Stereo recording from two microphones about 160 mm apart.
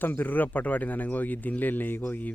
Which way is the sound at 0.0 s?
10° left (ahead or behind).